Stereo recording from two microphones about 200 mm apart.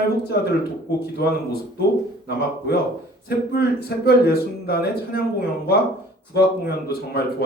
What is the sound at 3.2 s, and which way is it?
Speech, 50° left (ahead or behind).